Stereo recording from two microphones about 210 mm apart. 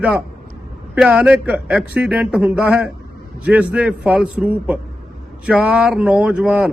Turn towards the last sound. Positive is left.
turn(degrees=-5)  # may be behind; listen again after turning